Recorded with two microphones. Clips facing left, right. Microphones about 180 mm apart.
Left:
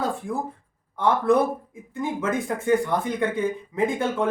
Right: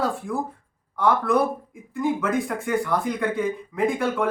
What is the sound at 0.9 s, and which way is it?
Speech, 25° left (ahead or behind).